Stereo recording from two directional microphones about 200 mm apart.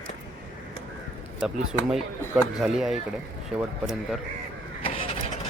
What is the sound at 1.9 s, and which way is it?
Speech, centre (ahead or behind).